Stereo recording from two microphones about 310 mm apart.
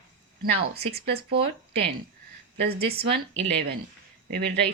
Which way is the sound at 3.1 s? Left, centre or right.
Right.